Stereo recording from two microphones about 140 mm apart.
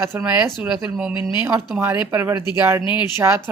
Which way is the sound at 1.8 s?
15° right (ahead or behind).